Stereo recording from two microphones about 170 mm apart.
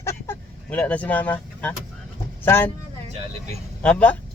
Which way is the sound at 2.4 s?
15° left (ahead or behind).